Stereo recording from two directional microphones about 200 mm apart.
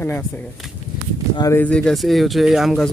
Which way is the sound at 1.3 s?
20° left (ahead or behind).